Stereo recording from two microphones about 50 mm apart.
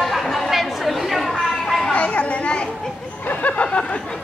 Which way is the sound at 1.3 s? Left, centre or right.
Centre.